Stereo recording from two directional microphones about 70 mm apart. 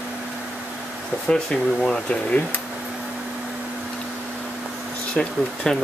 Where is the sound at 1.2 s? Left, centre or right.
Centre.